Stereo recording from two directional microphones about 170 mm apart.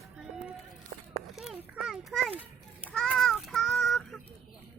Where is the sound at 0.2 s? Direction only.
5° right (ahead or behind).